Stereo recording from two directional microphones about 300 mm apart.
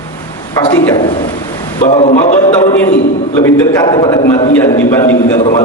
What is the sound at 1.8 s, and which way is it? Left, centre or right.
A man's voice, left.